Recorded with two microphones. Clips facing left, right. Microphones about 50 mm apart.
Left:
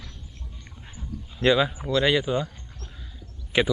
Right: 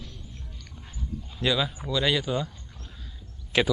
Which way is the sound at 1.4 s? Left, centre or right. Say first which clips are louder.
Left 6 dB; left.